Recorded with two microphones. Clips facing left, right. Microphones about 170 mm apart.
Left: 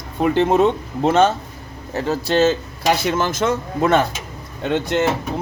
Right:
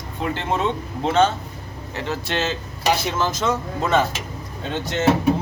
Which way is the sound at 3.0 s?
55° left (ahead or behind).